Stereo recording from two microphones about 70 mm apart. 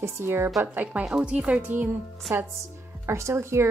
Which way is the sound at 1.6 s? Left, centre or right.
Right.